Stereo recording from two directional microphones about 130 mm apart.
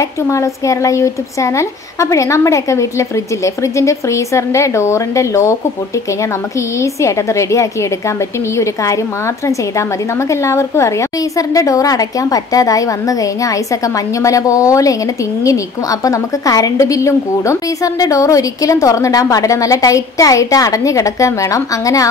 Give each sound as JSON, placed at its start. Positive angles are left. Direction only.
{"t": 0.3, "sound": "a woman's voice", "side_deg": 25}
{"t": 6.8, "sound": "a woman's voice", "side_deg": 25}
{"t": 10.3, "sound": "a woman's voice", "side_deg": 20}